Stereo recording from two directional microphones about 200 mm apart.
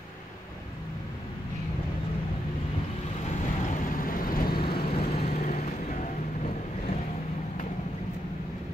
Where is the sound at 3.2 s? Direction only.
35° left (ahead or behind).